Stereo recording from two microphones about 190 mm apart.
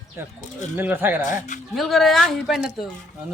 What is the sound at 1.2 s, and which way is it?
Speech, 45° left (ahead or behind).